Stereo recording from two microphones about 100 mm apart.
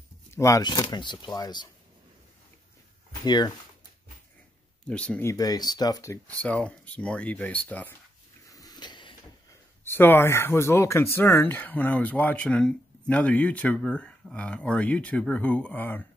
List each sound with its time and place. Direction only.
0.3 s a sound: 30° left (ahead or behind)
0.6 s speech: 45° left (ahead or behind)
3.3 s speech: 45° left (ahead or behind)
4.8 s speech: 10° left (ahead or behind)
5.2 s speech: 35° left (ahead or behind)
6.2 s speech: 15° left (ahead or behind)
8.5 s a sound: 40° left (ahead or behind)
9.8 s speech: 20° left (ahead or behind)